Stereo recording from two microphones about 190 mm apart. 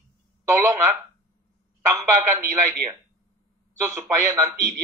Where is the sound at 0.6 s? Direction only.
15° right (ahead or behind).